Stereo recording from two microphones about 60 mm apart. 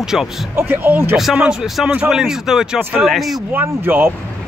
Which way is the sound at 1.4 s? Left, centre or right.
Centre.